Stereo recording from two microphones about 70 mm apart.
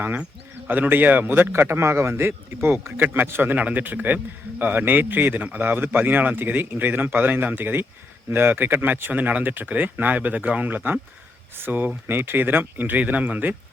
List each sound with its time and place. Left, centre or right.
0.7 s a man's voice: right